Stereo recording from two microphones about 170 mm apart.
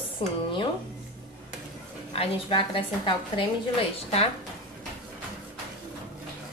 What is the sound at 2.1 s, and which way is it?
A woman's voice, 30° left (ahead or behind).